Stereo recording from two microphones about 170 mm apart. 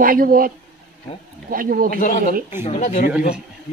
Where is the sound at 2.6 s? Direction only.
40° left (ahead or behind).